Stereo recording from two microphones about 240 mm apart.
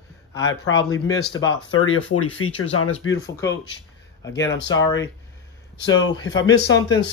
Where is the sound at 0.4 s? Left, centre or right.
Left.